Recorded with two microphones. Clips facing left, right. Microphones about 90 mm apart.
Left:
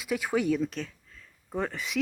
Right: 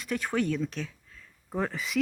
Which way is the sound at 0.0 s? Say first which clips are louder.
Left 1 dB; 5° left (ahead or behind).